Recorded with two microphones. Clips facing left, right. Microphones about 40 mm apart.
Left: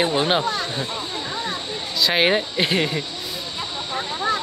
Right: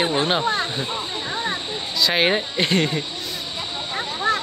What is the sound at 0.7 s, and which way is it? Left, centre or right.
Speech, centre.